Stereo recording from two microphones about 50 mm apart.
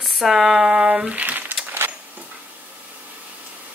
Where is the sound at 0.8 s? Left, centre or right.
Right.